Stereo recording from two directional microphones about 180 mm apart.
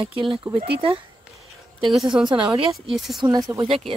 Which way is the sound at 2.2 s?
30° right (ahead or behind).